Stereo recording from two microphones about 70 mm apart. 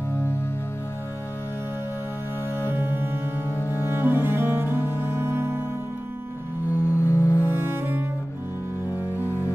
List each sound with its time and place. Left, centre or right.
0.1 s music: left
2.7 s music: right
3.5 s cello: left
3.8 s cello: right
6.7 s music: left
7.5 s cello: right
9.2 s music: left